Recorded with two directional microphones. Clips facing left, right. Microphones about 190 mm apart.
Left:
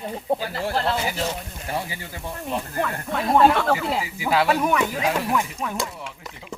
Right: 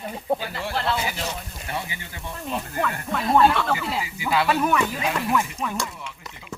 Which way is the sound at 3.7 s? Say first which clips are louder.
Left 3 dB; 30° left (ahead or behind).